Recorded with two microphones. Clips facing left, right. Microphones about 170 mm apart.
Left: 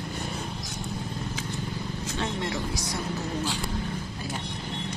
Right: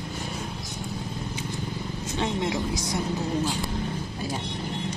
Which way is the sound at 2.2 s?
20° right (ahead or behind).